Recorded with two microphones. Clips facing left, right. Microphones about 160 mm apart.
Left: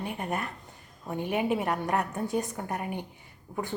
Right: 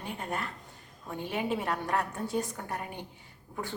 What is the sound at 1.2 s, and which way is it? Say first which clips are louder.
Speech: left 5 dB; 55° left (ahead or behind).